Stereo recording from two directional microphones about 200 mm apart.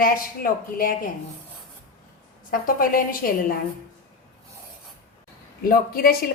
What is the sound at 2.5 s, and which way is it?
A woman's voice, 45° left (ahead or behind).